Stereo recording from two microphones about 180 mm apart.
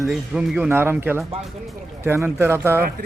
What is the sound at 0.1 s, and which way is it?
Speech, 5° right (ahead or behind).